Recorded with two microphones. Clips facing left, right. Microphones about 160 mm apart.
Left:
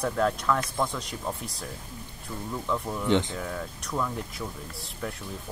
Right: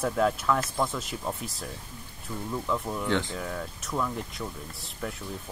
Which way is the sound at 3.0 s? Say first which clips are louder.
Left 5 dB; 20° left (ahead or behind).